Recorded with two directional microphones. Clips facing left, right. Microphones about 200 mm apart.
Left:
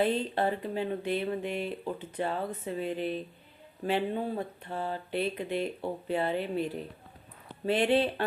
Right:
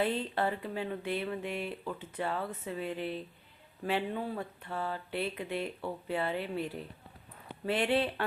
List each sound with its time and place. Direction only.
0.0 s speech: 20° left (ahead or behind)
2.4 s speech: 35° left (ahead or behind)